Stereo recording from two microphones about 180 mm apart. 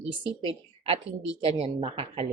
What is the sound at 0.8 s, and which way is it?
A woman's voice, 35° right (ahead or behind).